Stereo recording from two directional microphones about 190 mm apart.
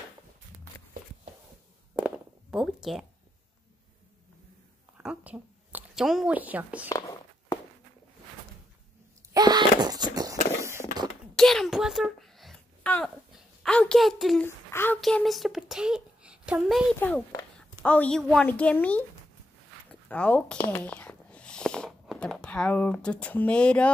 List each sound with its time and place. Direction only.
2.0 s a sound: 5° right (ahead or behind)
4.9 s a woman's voice: 5° right (ahead or behind)
6.9 s a sound: 15° left (ahead or behind)
9.3 s wail: 20° right (ahead or behind)
10.6 s a sound: 15° right (ahead or behind)
11.3 s speech: centre (ahead or behind)
14.7 s speech: 10° left (ahead or behind)
15.0 s a child's voice: centre (ahead or behind)
17.7 s a woman's voice: 10° left (ahead or behind)
20.5 s whispering: 10° left (ahead or behind)